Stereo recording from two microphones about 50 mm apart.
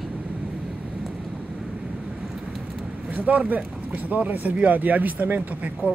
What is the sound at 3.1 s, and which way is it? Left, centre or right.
Speech, right.